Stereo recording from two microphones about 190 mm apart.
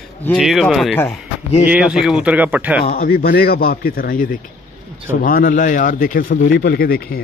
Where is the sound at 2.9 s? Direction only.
50° left (ahead or behind).